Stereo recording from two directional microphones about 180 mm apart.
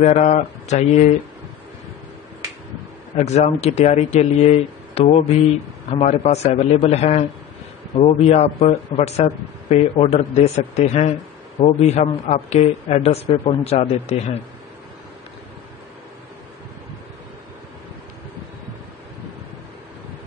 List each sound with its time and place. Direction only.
0.0 s speech: 40° left (ahead or behind)
3.2 s speech: 40° left (ahead or behind)